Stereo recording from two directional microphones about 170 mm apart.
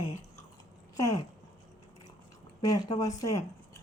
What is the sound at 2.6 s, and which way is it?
Speech, 20° left (ahead or behind).